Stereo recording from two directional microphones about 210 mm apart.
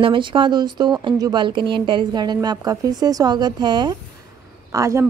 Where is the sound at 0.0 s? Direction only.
25° right (ahead or behind).